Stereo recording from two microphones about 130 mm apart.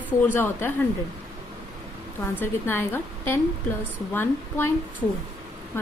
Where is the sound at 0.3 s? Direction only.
15° left (ahead or behind).